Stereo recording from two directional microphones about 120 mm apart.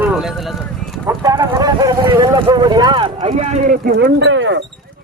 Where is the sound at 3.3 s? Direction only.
80° right.